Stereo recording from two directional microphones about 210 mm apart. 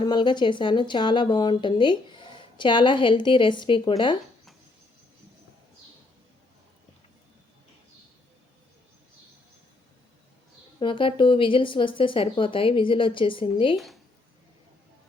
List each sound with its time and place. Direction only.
0.0 s speech: 20° left (ahead or behind)
10.8 s speech: 25° left (ahead or behind)
13.7 s speech: centre (ahead or behind)